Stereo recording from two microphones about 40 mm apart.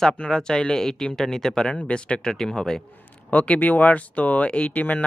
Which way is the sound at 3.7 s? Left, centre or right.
Left.